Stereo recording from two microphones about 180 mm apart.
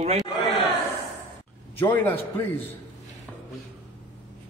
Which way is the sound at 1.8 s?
10° left (ahead or behind).